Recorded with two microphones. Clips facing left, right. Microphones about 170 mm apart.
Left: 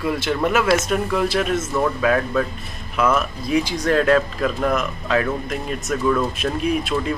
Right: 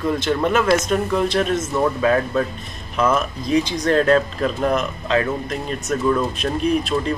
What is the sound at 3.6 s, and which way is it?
Speech, 25° right (ahead or behind).